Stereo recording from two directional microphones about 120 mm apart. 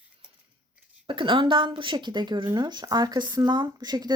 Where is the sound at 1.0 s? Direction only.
45° right (ahead or behind).